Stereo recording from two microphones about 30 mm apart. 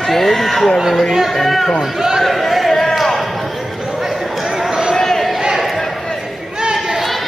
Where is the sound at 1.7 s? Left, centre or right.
Centre.